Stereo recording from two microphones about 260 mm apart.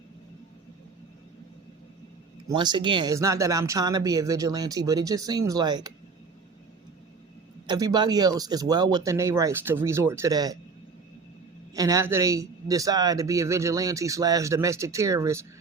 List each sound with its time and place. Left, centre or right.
2.6 s a man's voice: centre
7.7 s a man's voice: centre
11.7 s a man's voice: centre